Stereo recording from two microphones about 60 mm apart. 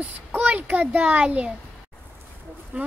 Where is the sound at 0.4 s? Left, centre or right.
Right.